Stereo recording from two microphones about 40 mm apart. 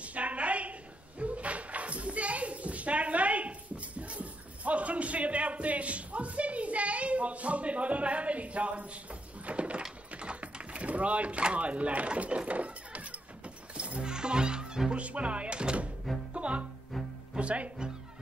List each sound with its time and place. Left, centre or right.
0.0 s a sound: right
10.1 s typing: right
13.7 s music: right
14.9 s speech: right
16.3 s music: right